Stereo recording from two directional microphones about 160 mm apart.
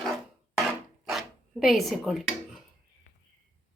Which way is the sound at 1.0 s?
Centre (ahead or behind).